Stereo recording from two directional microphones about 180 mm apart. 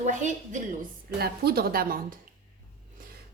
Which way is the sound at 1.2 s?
60° right (ahead or behind).